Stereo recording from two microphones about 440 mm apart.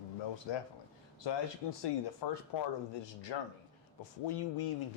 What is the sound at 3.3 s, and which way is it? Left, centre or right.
Speech, left.